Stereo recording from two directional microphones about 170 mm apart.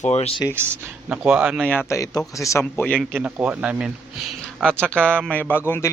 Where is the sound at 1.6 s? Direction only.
15° left (ahead or behind).